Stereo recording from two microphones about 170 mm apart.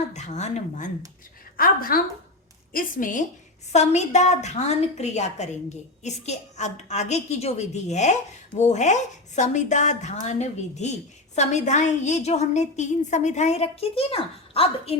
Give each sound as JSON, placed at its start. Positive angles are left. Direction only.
{"t": 0.1, "sound": "speech", "side_deg": 45}
{"t": 1.5, "sound": "a woman's voice", "side_deg": 60}
{"t": 3.7, "sound": "a woman's voice", "side_deg": 40}